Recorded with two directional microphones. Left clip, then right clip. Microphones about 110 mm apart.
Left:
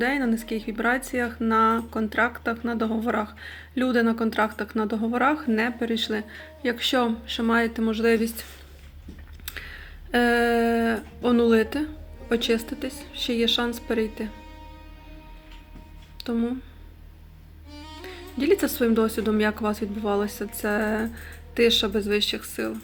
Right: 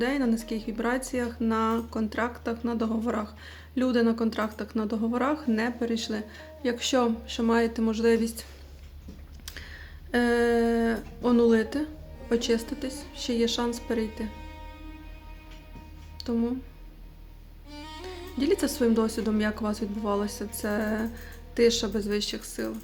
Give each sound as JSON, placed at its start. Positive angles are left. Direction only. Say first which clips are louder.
{"t": 0.0, "sound": "speech", "louder": "left 3 dB", "side_deg": -30}
{"t": 9.5, "sound": "speech", "louder": "left 5 dB", "side_deg": -30}
{"t": 14.3, "sound": "music", "louder": "left 1 dB", "side_deg": 0}
{"t": 16.1, "sound": "speech", "louder": "left 2 dB", "side_deg": -30}
{"t": 17.7, "sound": "music", "louder": "even", "side_deg": 0}
{"t": 18.3, "sound": "speech", "louder": "left 4 dB", "side_deg": -30}